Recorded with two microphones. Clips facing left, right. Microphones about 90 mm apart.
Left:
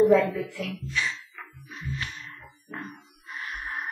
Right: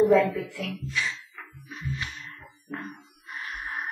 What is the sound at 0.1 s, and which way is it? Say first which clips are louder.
Speech: even; centre (ahead or behind).